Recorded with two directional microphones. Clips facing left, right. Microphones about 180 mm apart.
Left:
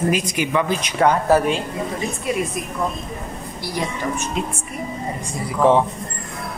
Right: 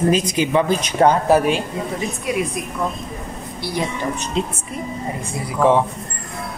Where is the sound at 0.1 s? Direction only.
25° right (ahead or behind).